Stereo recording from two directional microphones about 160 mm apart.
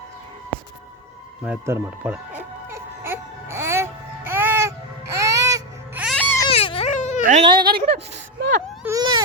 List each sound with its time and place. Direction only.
1.5 s music: 15° right (ahead or behind)
6.1 s baby cry: 10° left (ahead or behind)
6.5 s baby cry: 35° left (ahead or behind)
6.9 s cat: 50° left (ahead or behind)
7.4 s a woman's voice: 30° right (ahead or behind)
7.9 s a sound: 90° right
8.8 s baby cry: 20° right (ahead or behind)